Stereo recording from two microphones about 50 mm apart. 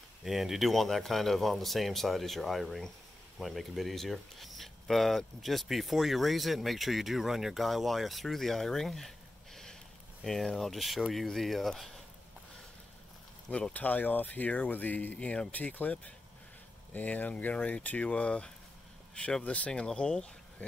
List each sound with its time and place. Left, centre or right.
0.2 s speech: centre
10.7 s speech: centre
13.5 s speech: left
15.1 s speech: centre
15.5 s speech: left
19.7 s speech: centre